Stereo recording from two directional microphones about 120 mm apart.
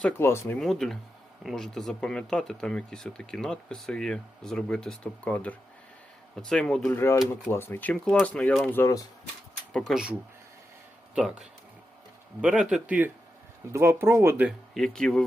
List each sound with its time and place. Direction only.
0.2 s speech: 20° left (ahead or behind)
0.6 s speech: 5° left (ahead or behind)
6.9 s speech: 20° left (ahead or behind)
8.8 s speech: 30° left (ahead or behind)
9.7 s speech: 5° left (ahead or behind)
11.1 s a man's voice: 5° right (ahead or behind)
13.7 s speech: 20° right (ahead or behind)
14.8 s speech: 5° left (ahead or behind)